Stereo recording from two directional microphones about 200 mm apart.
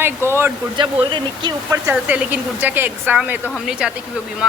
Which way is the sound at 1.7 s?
10° right (ahead or behind).